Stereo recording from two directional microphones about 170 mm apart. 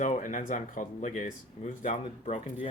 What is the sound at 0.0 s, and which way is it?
Speech, 50° left (ahead or behind).